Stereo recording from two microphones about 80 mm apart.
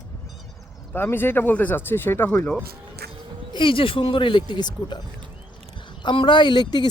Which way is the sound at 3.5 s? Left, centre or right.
Left.